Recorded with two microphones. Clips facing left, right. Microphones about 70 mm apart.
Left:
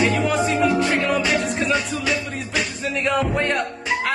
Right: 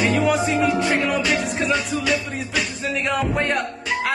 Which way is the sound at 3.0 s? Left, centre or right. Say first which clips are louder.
Left 2 dB; centre.